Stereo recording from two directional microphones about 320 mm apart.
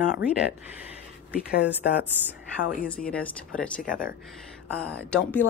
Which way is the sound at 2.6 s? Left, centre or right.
Centre.